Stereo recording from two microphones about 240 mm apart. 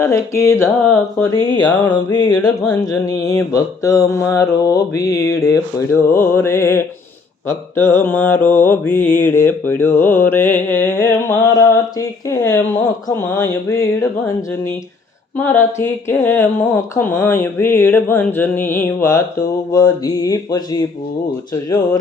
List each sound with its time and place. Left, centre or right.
0.0 s mantra: centre
15.4 s mantra: centre